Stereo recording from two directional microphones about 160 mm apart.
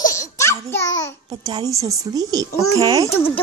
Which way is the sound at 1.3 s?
25° right (ahead or behind).